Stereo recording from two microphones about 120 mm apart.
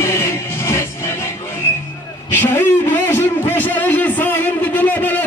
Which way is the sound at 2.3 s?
20° left (ahead or behind).